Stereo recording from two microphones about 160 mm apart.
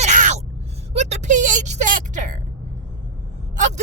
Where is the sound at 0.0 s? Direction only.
50° right (ahead or behind).